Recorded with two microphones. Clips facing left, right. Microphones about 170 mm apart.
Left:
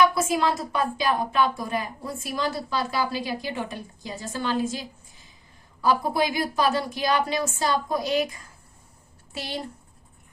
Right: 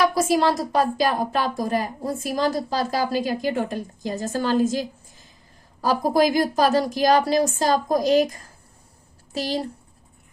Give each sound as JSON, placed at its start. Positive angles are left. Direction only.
{"t": 0.0, "sound": "speech", "side_deg": -40}